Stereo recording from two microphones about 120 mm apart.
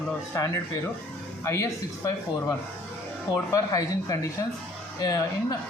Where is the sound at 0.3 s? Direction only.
25° left (ahead or behind).